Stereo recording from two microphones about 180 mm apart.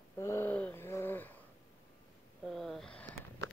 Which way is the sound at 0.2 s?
15° left (ahead or behind).